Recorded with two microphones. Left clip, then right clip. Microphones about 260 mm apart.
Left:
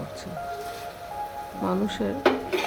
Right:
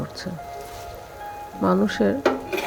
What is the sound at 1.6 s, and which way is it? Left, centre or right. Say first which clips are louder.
Speech: right 7 dB; right.